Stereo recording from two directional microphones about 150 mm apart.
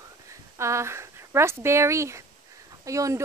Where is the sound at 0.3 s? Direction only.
20° right (ahead or behind).